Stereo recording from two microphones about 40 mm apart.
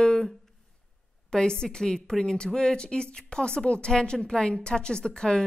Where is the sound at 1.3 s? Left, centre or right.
Centre.